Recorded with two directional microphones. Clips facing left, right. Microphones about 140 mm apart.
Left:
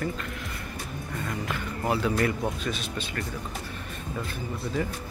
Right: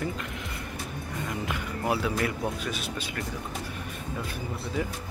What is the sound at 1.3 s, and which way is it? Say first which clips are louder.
Speech: even; 15° right (ahead or behind).